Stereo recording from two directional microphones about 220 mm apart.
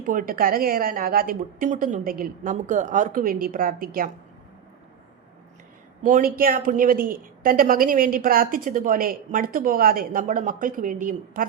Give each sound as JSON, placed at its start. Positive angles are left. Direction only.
{"t": 0.0, "sound": "a woman's voice", "side_deg": -35}
{"t": 6.0, "sound": "a woman's voice", "side_deg": -35}